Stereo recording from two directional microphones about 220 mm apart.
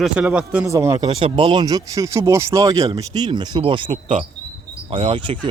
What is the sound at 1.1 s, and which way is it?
Speech, 25° right (ahead or behind).